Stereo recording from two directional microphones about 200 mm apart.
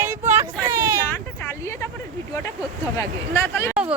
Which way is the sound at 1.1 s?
10° left (ahead or behind).